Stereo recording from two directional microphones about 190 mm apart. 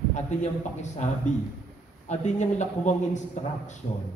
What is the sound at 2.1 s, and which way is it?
Speech, 40° left (ahead or behind).